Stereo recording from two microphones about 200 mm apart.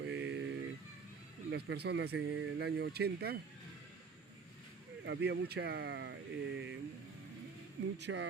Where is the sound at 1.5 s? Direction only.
55° right (ahead or behind).